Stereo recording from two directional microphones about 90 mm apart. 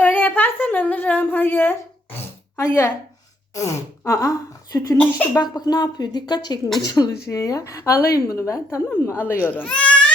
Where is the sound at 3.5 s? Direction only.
35° left (ahead or behind).